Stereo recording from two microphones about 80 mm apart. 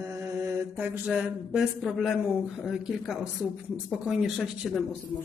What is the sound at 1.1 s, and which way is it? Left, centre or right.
Speech, centre.